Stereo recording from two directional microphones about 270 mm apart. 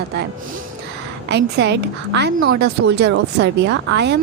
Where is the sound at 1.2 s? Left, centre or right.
Right.